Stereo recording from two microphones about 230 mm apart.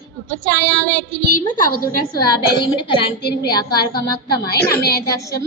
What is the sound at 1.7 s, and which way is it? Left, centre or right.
Speech, left.